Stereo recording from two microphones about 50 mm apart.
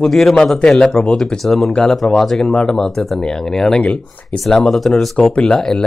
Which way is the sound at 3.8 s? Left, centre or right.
Left.